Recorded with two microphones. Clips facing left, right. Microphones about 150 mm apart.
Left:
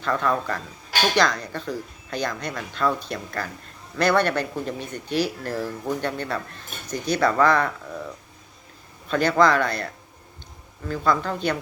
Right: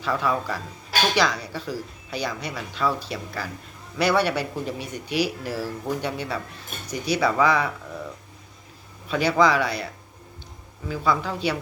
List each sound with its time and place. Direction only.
0.0 s speech: 5° right (ahead or behind)
9.0 s speech: 5° right (ahead or behind)